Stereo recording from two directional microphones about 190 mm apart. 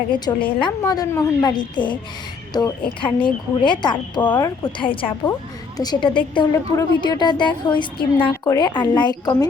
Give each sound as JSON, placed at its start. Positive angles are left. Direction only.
{"t": 0.1, "sound": "a woman's voice", "side_deg": 25}